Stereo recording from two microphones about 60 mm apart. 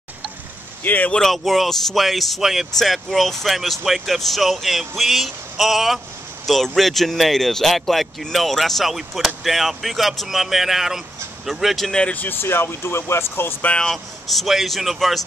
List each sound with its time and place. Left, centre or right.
0.8 s speech: left
1.1 s speech: centre
11.9 s speech: centre
12.2 s speech: left
13.7 s speech: centre